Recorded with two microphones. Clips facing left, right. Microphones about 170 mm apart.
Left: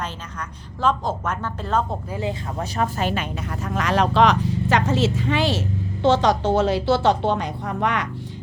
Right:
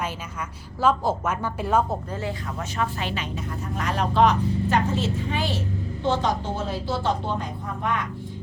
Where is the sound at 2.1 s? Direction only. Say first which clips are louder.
Left 3 dB; 15° left (ahead or behind); by 3.2 s 45° left (ahead or behind).